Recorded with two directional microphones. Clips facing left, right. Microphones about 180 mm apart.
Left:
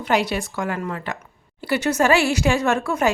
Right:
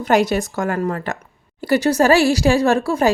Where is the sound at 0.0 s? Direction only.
45° right (ahead or behind).